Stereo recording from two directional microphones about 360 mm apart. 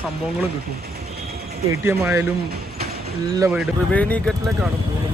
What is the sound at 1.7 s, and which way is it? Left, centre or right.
Speech, centre.